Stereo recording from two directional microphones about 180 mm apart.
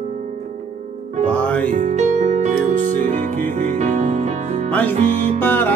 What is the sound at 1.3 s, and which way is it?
Music, 5° left (ahead or behind).